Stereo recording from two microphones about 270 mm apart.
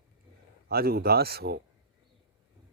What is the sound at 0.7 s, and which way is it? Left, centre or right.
Speech, right.